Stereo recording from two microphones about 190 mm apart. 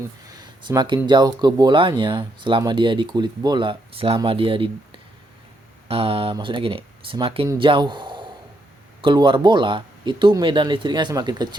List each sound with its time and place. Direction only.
0.3 s a sound: 20° right (ahead or behind)
1.0 s speech: 20° right (ahead or behind)
5.9 s a man's voice: 30° right (ahead or behind)